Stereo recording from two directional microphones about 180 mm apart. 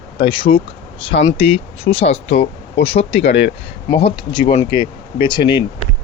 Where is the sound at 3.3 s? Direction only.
70° left (ahead or behind).